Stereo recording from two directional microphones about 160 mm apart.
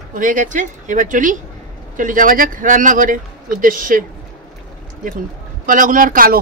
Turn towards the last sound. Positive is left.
turn(degrees=-60)  # may be behind; listen again after turning